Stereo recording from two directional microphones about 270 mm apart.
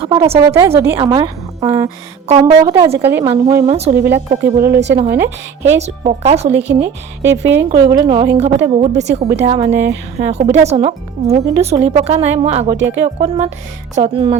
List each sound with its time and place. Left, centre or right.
0.0 s speech: centre
3.9 s speech: right
5.7 s speech: right
7.2 s speech: centre